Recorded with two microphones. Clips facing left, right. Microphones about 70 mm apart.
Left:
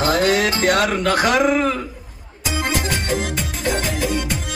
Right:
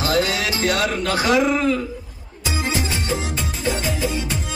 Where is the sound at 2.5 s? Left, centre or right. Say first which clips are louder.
Left 2 dB; left.